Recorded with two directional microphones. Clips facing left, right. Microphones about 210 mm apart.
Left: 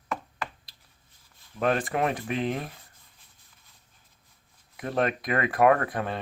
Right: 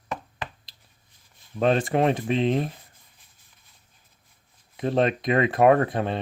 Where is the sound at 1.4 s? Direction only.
25° right (ahead or behind).